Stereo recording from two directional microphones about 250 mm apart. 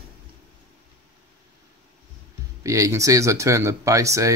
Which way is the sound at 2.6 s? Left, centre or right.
Centre.